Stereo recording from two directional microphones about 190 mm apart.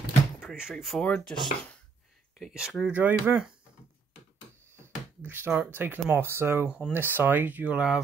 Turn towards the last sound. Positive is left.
turn(degrees=-5)  # may be behind; listen again after turning